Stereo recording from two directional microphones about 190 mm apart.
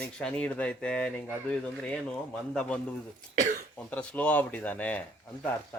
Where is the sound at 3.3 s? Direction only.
40° right (ahead or behind).